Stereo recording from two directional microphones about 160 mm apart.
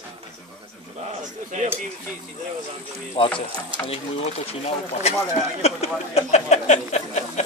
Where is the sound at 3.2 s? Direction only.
35° left (ahead or behind).